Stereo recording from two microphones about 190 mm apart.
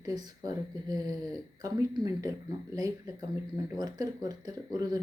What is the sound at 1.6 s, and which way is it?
Speech, 20° right (ahead or behind).